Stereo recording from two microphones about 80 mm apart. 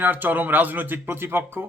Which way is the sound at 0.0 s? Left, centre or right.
Right.